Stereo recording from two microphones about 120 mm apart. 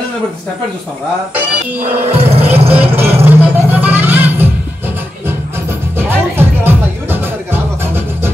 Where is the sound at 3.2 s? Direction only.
15° right (ahead or behind).